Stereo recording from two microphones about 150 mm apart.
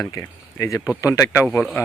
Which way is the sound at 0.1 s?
20° left (ahead or behind).